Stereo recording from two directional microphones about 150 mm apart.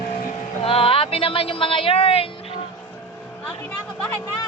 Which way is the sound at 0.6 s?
40° left (ahead or behind).